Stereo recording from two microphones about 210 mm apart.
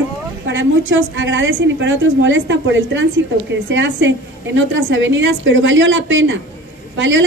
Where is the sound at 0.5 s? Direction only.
65° right (ahead or behind).